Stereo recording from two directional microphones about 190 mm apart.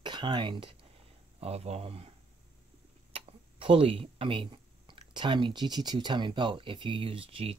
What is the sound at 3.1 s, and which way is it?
Speech, 30° right (ahead or behind).